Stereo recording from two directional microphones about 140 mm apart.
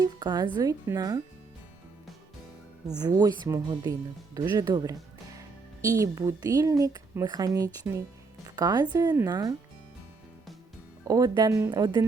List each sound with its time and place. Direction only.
0.0 s a woman's voice: 30° right (ahead or behind)
3.0 s a woman's voice: 30° right (ahead or behind)
11.0 s a woman's voice: 25° right (ahead or behind)